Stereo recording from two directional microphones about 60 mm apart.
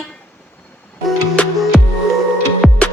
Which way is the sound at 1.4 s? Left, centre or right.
Centre.